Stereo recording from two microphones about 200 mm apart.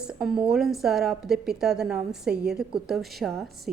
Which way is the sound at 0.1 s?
5° right (ahead or behind).